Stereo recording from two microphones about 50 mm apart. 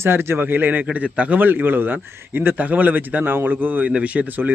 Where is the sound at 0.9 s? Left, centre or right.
Right.